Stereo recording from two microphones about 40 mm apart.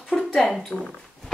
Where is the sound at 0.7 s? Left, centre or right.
Centre.